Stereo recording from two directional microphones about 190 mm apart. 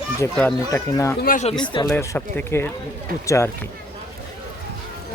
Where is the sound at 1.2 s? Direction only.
45° left (ahead or behind).